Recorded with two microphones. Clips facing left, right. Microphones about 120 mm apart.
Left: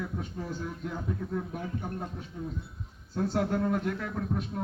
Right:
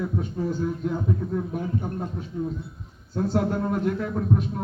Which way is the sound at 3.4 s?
30° right (ahead or behind).